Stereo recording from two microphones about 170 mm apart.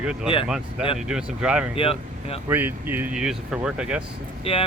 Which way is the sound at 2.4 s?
10° right (ahead or behind).